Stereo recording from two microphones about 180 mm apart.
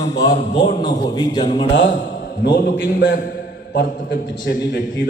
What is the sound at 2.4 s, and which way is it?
Speech, 60° left (ahead or behind).